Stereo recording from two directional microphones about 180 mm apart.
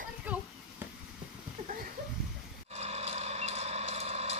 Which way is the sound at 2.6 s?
35° right (ahead or behind).